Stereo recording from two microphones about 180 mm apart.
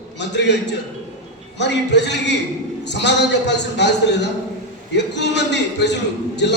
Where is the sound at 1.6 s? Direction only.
75° left (ahead or behind).